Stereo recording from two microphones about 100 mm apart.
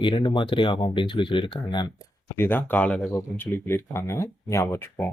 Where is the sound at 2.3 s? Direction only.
20° left (ahead or behind).